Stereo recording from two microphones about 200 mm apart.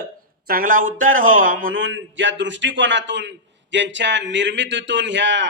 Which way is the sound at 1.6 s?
70° right (ahead or behind).